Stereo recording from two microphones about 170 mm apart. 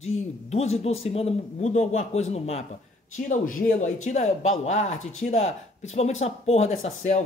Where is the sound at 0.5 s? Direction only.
40° left (ahead or behind).